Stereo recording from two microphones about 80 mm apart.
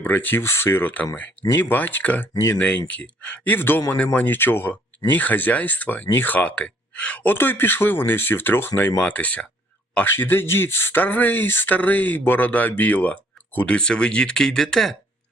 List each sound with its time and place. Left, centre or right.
0.0 s speech: left
9.0 s speech: centre
10.1 s speech: left; by 14.9 s centre